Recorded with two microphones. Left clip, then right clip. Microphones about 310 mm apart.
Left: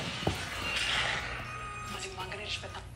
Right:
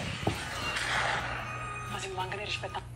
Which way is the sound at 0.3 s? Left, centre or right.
Centre.